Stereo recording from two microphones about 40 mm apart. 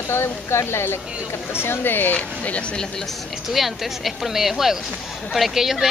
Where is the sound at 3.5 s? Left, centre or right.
Centre.